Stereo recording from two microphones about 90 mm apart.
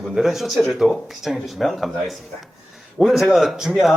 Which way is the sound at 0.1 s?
5° right (ahead or behind).